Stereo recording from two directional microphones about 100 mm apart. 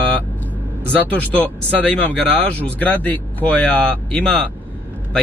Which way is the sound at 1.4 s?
15° left (ahead or behind).